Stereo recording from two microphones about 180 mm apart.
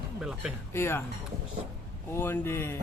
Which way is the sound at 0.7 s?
15° left (ahead or behind).